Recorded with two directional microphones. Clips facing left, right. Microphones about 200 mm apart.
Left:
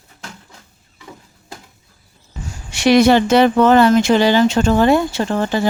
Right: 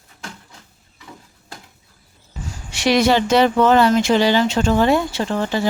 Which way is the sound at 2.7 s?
55° left (ahead or behind).